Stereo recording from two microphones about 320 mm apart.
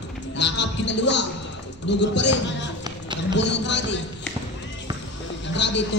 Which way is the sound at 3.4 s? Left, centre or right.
Left.